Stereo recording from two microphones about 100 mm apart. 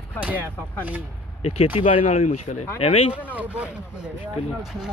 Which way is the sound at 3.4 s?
15° right (ahead or behind).